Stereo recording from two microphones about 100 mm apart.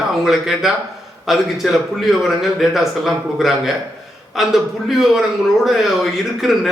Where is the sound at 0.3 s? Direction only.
5° right (ahead or behind).